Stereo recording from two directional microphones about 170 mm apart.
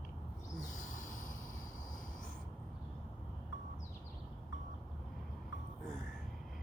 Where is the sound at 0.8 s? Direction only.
50° left (ahead or behind).